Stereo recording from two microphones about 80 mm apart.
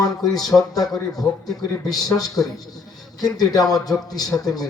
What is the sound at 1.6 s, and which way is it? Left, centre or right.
A man's voice, left.